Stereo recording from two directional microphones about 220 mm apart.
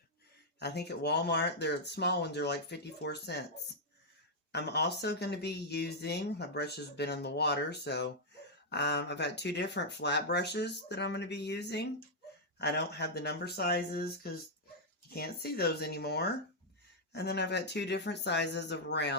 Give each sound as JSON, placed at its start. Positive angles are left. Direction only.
{"t": 0.6, "sound": "speech", "side_deg": 50}
{"t": 4.5, "sound": "speech", "side_deg": 50}